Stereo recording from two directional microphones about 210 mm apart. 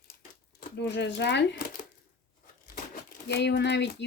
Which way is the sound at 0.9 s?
55° left (ahead or behind).